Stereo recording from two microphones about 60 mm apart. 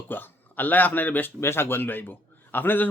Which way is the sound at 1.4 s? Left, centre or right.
Left.